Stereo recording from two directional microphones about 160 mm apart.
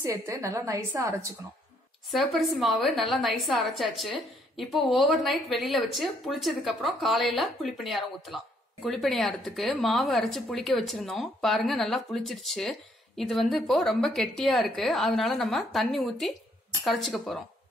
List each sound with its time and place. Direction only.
0.0 s a woman's voice: 20° right (ahead or behind)
2.0 s speech: centre (ahead or behind)